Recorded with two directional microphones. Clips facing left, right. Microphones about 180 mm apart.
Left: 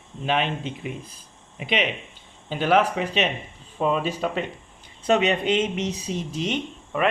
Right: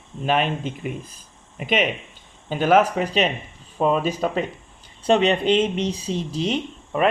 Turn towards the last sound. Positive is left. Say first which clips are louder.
# right 3 dB
turn(degrees=-35)  # may be behind; listen again after turning